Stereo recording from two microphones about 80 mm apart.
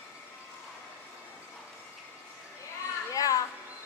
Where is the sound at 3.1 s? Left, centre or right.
Left.